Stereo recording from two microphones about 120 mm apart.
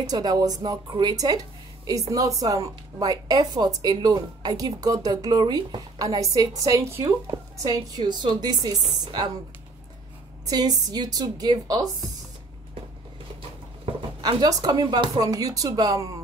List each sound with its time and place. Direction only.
0.0 s a woman's voice: 35° right (ahead or behind)
10.4 s a woman's voice: 30° right (ahead or behind)
14.4 s a woman's voice: 35° right (ahead or behind)